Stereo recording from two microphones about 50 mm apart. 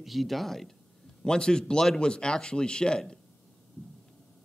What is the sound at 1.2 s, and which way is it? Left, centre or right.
Speech, centre.